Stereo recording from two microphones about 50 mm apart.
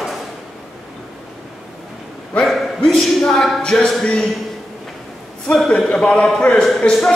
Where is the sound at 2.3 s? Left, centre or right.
Left.